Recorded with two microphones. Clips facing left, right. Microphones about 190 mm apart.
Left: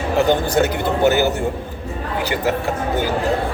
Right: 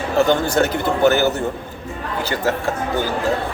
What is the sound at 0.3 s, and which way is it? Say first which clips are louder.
Speech: even; 15° left (ahead or behind).